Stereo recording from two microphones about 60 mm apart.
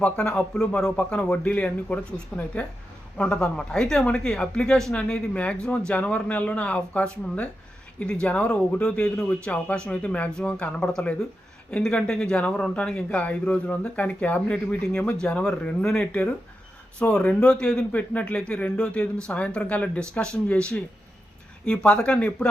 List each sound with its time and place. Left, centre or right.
0.0 s speech: centre
4.9 s speech: left